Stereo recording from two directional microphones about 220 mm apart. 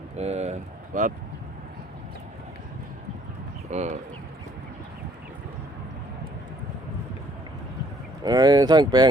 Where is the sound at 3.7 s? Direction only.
30° right (ahead or behind).